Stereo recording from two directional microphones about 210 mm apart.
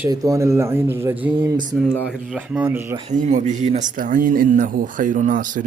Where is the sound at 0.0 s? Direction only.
15° right (ahead or behind).